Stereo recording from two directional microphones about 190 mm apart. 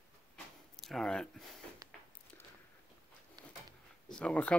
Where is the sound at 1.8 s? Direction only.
20° right (ahead or behind).